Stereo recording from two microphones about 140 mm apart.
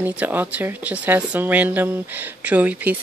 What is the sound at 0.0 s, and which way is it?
Speech, 15° right (ahead or behind).